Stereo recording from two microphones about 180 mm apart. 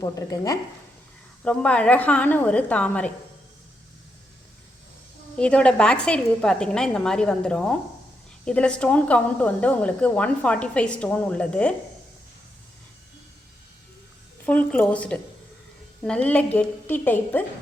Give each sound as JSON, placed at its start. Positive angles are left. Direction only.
{"t": 0.0, "sound": "a woman's voice", "side_deg": 20}
{"t": 1.5, "sound": "a woman's voice", "side_deg": 5}
{"t": 5.4, "sound": "a woman's voice", "side_deg": 5}
{"t": 14.4, "sound": "a woman's voice", "side_deg": 5}